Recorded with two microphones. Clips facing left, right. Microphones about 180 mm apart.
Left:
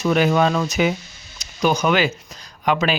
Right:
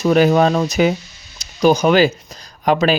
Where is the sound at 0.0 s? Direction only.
40° right (ahead or behind).